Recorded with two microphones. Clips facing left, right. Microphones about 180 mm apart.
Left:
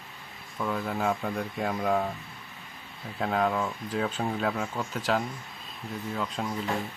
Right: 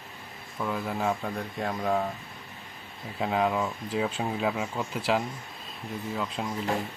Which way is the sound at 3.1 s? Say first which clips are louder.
Even; 5° right (ahead or behind).